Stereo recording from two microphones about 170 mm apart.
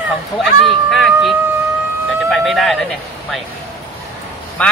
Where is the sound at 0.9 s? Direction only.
Centre (ahead or behind).